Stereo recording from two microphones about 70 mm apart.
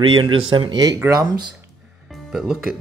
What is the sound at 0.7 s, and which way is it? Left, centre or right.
Speech, right.